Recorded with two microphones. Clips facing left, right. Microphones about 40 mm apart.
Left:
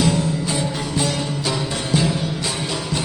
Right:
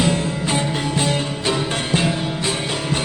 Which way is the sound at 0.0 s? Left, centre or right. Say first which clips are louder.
Even; right.